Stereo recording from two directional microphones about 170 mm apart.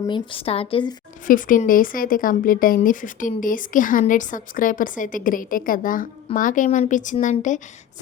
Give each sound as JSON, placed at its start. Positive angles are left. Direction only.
{"t": 0.1, "sound": "a woman's voice", "side_deg": 30}
{"t": 1.3, "sound": "speech", "side_deg": 55}